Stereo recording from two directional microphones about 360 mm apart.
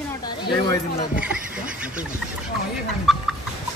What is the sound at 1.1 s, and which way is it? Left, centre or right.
Speech, centre.